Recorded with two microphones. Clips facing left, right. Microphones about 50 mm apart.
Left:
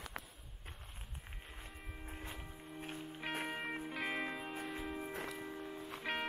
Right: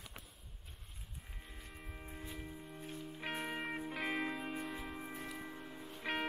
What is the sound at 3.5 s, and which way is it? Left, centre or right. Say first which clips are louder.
Music: right 1 dB; centre.